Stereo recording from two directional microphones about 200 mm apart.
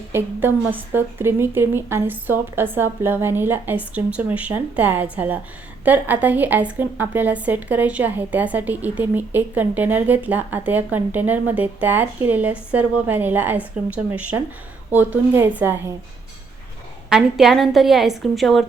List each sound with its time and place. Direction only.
0.1 s a woman's voice: 10° right (ahead or behind)
17.1 s a woman's voice: centre (ahead or behind)